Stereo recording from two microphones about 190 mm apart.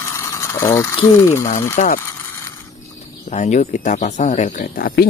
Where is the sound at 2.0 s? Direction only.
15° left (ahead or behind).